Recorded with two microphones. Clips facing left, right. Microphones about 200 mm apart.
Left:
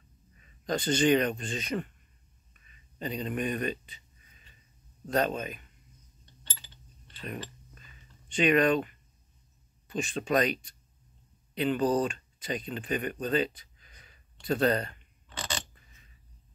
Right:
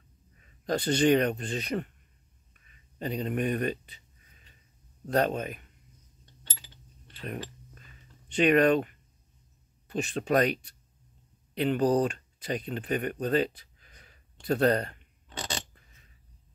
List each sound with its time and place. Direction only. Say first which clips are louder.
0.4 s a man's voice: right 2 dB; 60° right (ahead or behind)
3.0 s speech: right 2 dB; 55° right (ahead or behind)
5.0 s speech: right 2 dB; 60° right (ahead or behind)
7.7 s a sound: right 2 dB; 55° right (ahead or behind)
9.8 s speech: right 2 dB; 65° right (ahead or behind)